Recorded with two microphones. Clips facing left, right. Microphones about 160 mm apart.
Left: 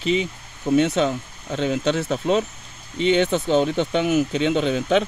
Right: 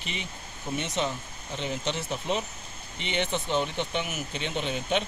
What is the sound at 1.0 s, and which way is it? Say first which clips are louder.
Speech: left 9 dB; 90° left.